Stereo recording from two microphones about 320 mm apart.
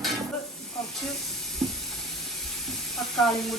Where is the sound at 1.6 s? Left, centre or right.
Centre.